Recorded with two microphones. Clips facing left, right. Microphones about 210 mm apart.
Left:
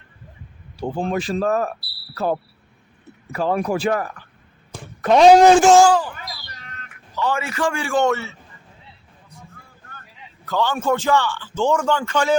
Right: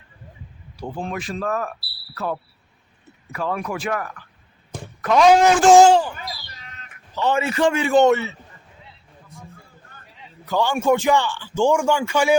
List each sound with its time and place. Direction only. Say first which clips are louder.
0.8 s speech: left 5 dB; 30° left (ahead or behind)
5.7 s a man's voice: right 2 dB; 25° right (ahead or behind)
7.2 s a man's voice: right 3 dB; 25° right (ahead or behind)
10.4 s a man's voice: right 2 dB; 10° right (ahead or behind)